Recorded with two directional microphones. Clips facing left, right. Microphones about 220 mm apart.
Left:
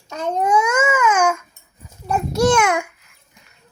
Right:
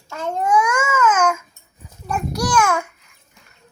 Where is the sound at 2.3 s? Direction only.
25° left (ahead or behind).